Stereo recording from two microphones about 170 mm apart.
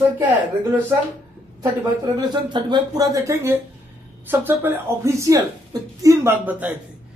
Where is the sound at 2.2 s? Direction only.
25° right (ahead or behind).